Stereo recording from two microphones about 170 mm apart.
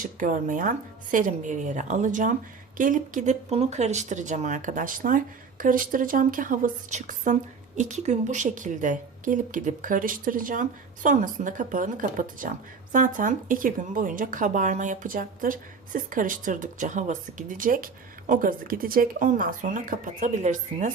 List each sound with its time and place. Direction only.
0.0 s a woman's voice: 50° right (ahead or behind)